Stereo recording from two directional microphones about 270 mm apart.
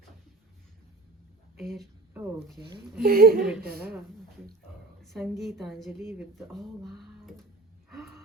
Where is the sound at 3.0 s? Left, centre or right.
Right.